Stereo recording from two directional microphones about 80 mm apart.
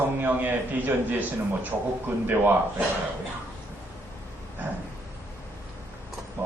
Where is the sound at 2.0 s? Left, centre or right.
Right.